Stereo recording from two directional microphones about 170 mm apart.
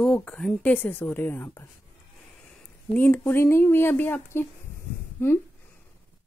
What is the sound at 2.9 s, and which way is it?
Speech, 10° left (ahead or behind).